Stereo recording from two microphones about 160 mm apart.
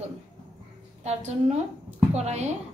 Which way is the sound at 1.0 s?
45° right (ahead or behind).